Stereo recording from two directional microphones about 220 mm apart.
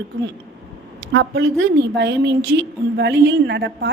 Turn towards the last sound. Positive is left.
turn(degrees=-50)  # may be behind; listen again after turning